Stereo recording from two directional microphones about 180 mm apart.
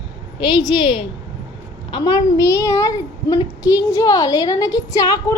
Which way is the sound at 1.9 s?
25° left (ahead or behind).